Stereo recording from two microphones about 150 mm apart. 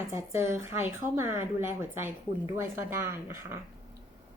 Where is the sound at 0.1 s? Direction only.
20° right (ahead or behind).